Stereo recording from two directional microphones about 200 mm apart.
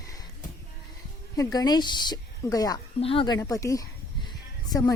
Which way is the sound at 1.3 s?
20° left (ahead or behind).